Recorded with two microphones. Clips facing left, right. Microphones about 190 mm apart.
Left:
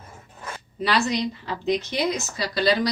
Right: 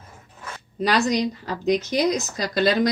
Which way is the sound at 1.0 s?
45° right (ahead or behind).